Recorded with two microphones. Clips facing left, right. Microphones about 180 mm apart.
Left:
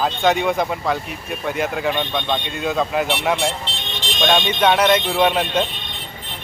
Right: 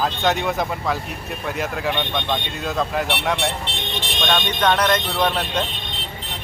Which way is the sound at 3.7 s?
60° right (ahead or behind).